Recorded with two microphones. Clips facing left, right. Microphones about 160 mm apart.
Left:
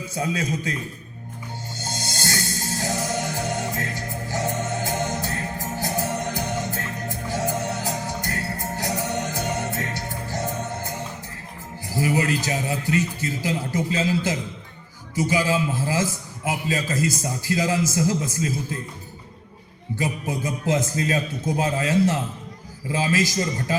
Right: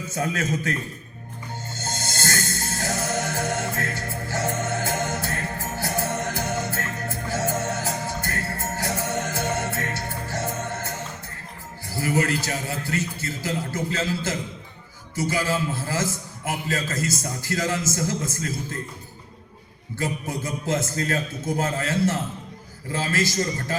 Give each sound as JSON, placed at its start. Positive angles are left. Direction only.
{"t": 0.1, "sound": "a man's voice", "side_deg": 15}
{"t": 1.7, "sound": "music", "side_deg": 15}
{"t": 11.9, "sound": "a man's voice", "side_deg": 15}
{"t": 20.0, "sound": "a man's voice", "side_deg": 15}